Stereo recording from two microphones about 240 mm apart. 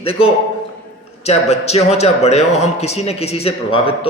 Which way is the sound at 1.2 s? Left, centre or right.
Left.